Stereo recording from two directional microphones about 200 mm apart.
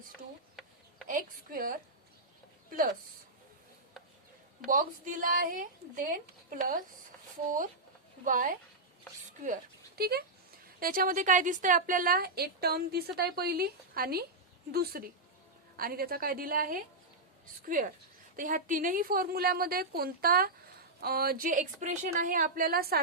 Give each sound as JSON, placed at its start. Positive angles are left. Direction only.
{"t": 1.0, "sound": "a woman's voice", "side_deg": -45}
{"t": 4.6, "sound": "a woman's voice", "side_deg": -40}
{"t": 8.2, "sound": "a woman's voice", "side_deg": -40}